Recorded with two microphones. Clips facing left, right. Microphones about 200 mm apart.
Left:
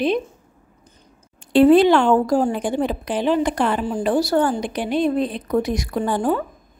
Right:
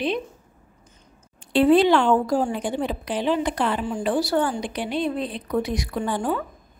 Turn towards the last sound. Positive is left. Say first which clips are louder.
# left 4 dB
turn(degrees=45)  # may be behind; listen again after turning